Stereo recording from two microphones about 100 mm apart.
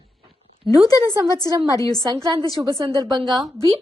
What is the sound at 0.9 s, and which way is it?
A woman's voice, 40° left (ahead or behind).